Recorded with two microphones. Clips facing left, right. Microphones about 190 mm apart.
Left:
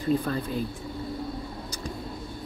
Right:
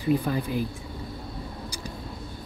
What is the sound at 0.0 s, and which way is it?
Speech, 15° right (ahead or behind).